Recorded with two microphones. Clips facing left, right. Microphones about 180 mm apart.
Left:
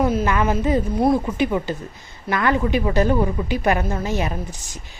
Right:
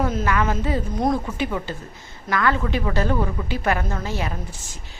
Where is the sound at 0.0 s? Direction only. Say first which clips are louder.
Left 3 dB; 10° left (ahead or behind).